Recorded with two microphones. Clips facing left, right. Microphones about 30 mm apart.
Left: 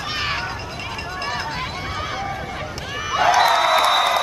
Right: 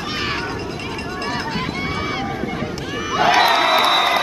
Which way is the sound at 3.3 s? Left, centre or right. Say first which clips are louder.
Right 1 dB; right.